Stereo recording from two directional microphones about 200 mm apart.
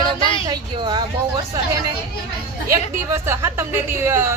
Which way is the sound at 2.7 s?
15° right (ahead or behind).